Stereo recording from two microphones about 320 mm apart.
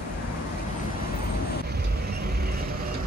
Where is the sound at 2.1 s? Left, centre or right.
Right.